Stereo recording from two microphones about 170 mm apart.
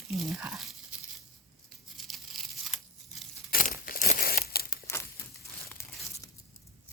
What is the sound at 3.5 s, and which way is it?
Crumpling, 55° left (ahead or behind).